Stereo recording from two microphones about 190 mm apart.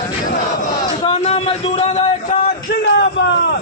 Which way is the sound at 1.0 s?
35° left (ahead or behind).